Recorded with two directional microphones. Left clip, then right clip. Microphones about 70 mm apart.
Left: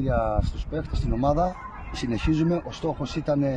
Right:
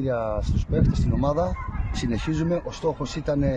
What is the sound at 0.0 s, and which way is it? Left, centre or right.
Speech, right.